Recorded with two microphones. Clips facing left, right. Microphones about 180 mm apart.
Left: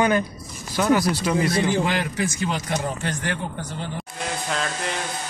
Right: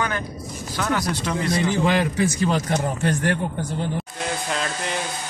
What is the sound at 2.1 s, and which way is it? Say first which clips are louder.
Speech: right 4 dB; 35° right (ahead or behind).